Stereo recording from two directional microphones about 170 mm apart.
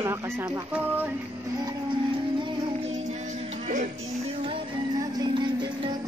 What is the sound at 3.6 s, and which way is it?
Music, 45° right (ahead or behind).